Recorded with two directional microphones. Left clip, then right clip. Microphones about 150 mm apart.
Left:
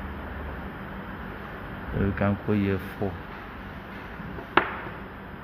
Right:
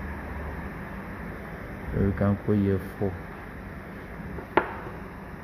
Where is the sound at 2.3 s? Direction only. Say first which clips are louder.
Even; centre (ahead or behind).